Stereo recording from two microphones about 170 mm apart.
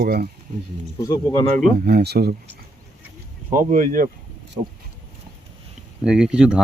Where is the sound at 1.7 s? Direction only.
65° right (ahead or behind).